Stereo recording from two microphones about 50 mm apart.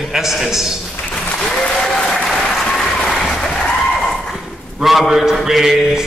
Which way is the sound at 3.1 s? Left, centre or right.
Centre.